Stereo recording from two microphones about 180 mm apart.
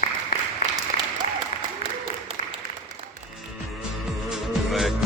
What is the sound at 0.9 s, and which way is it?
Applause, 50° left (ahead or behind).